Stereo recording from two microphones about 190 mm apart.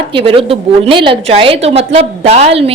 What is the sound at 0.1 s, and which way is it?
A woman's voice, 30° right (ahead or behind).